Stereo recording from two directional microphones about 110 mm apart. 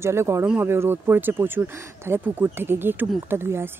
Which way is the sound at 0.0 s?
25° right (ahead or behind).